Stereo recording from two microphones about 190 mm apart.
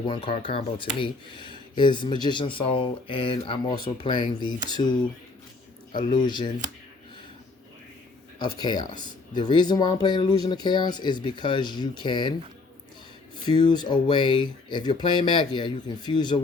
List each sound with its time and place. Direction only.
0.1 s speech: 25° left (ahead or behind)
5.9 s speech: 25° left (ahead or behind)
8.5 s speech: 20° left (ahead or behind)
13.4 s speech: 25° left (ahead or behind)